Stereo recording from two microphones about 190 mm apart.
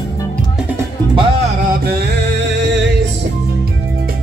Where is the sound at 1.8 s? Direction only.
60° right (ahead or behind).